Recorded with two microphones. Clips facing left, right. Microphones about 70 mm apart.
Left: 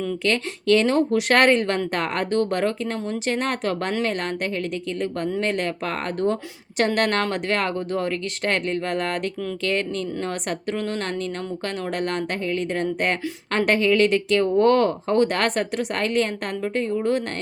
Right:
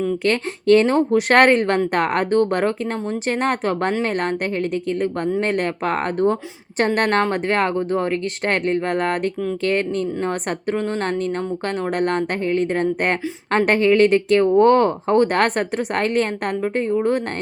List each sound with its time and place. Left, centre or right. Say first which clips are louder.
0.3 s speech: right 4 dB; right